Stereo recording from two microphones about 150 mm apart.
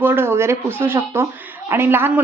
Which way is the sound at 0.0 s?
15° right (ahead or behind).